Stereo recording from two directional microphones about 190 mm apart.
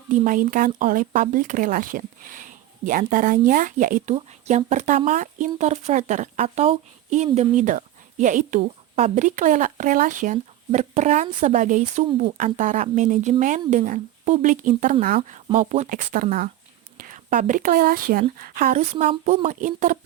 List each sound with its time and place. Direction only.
0.1 s speech: 45° right (ahead or behind)
19.5 s speech: 45° right (ahead or behind)